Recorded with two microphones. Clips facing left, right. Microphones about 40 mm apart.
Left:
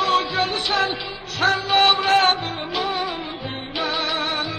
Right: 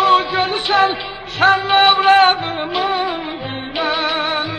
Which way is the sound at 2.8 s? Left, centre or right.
Right.